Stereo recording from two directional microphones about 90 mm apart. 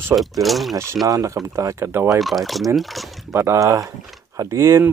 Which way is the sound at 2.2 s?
Centre (ahead or behind).